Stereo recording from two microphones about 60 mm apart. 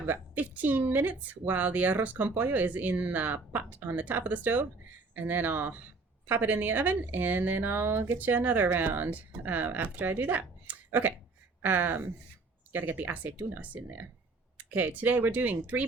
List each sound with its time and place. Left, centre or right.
0.0 s a woman's voice: right
8.3 s a woman's voice: right